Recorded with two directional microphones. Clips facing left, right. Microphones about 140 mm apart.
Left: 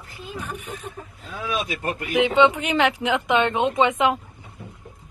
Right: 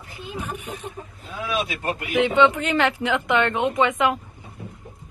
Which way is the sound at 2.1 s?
15° left (ahead or behind).